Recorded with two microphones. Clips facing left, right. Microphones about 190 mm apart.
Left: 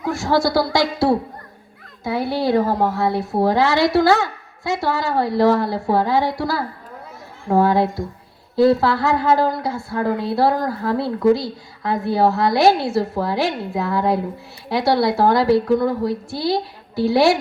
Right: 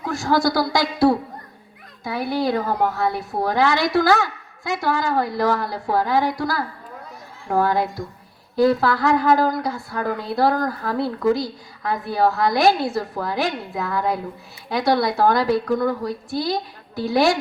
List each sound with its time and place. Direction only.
0.0 s speech: 20° left (ahead or behind)
2.3 s speech: 25° left (ahead or behind)
16.9 s a woman's voice: 20° right (ahead or behind)